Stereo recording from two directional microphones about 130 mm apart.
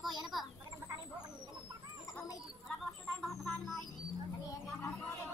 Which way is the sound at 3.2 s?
Centre (ahead or behind).